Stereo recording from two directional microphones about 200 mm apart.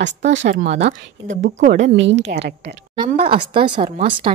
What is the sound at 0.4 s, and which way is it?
Speech, 35° right (ahead or behind).